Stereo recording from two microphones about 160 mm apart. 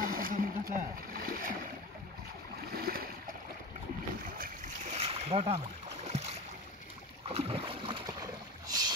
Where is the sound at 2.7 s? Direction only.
70° right (ahead or behind).